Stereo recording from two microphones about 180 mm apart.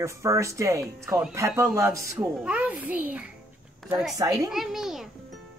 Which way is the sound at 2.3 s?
5° right (ahead or behind).